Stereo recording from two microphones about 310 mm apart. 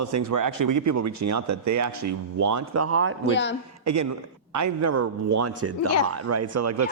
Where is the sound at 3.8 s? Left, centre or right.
Right.